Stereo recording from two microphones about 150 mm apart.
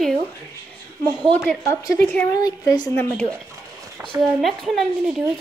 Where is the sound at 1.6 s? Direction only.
20° left (ahead or behind).